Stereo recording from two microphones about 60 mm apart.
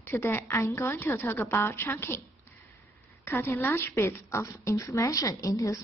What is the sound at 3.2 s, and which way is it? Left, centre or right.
A woman's voice, left.